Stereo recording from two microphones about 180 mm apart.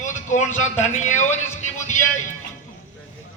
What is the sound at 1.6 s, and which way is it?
Music, 45° left (ahead or behind).